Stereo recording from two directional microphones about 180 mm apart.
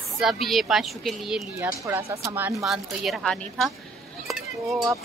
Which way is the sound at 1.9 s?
15° right (ahead or behind).